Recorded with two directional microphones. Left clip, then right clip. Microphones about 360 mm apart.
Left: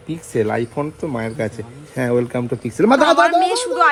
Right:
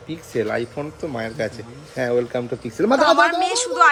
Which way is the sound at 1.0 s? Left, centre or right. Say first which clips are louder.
Left 2 dB; left.